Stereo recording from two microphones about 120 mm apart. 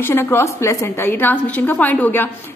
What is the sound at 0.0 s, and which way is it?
A woman's voice, 20° left (ahead or behind).